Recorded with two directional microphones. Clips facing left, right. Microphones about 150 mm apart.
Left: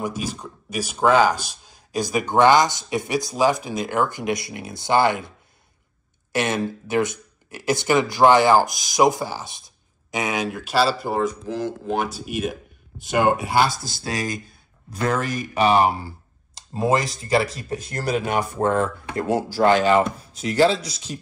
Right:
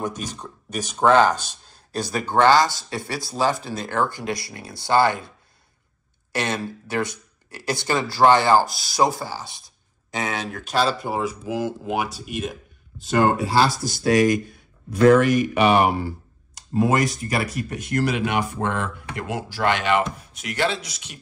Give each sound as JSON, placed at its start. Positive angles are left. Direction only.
{"t": 0.0, "sound": "speech", "side_deg": 10}
{"t": 6.3, "sound": "speech", "side_deg": 15}
{"t": 13.0, "sound": "speech", "side_deg": 15}